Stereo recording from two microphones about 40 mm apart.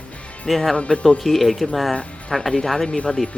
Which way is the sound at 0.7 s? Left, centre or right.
Left.